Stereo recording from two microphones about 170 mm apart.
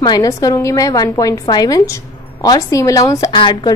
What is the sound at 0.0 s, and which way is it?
A woman's voice, 20° left (ahead or behind).